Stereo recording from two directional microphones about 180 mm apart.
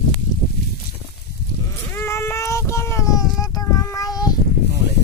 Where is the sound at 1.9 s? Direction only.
15° left (ahead or behind).